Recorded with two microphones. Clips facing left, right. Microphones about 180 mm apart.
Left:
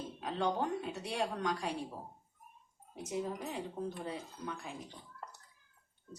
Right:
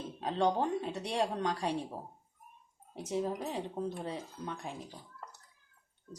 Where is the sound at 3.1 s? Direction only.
30° right (ahead or behind).